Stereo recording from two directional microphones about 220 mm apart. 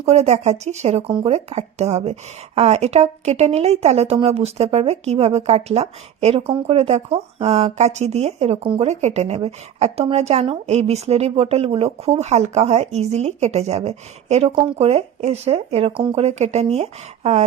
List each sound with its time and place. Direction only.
0.0 s speech: 30° right (ahead or behind)